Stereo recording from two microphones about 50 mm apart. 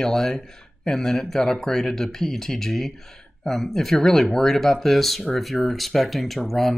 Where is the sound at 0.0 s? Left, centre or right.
Centre.